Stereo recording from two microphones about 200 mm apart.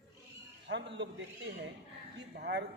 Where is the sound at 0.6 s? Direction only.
60° right (ahead or behind).